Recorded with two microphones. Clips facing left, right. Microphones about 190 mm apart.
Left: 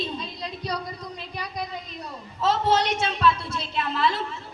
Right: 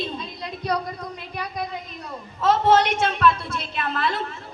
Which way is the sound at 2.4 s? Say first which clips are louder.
Right 4 dB; 55° right (ahead or behind).